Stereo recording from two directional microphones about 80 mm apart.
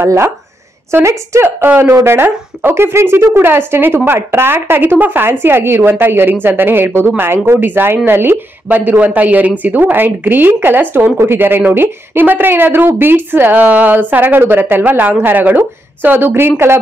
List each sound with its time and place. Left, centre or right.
0.0 s speech: right